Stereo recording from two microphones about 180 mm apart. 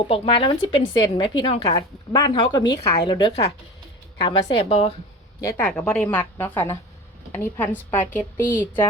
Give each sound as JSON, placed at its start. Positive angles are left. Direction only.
{"t": 0.0, "sound": "a woman's voice", "side_deg": 30}
{"t": 5.4, "sound": "speech", "side_deg": 15}
{"t": 5.6, "sound": "a woman's voice", "side_deg": 5}